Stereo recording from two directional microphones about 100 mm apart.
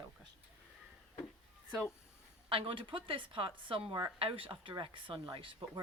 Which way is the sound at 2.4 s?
65° right (ahead or behind).